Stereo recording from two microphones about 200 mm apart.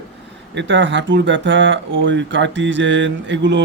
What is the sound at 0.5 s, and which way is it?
Speech, 65° right (ahead or behind).